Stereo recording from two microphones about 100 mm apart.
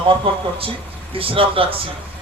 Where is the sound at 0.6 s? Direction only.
65° right (ahead or behind).